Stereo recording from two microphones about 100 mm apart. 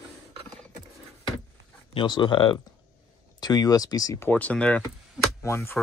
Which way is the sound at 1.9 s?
50° left (ahead or behind).